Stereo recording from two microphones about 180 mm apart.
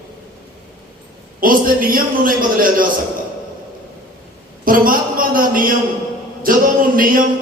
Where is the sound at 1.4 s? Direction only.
50° right (ahead or behind).